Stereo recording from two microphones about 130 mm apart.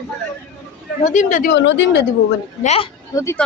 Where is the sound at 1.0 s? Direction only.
75° left (ahead or behind).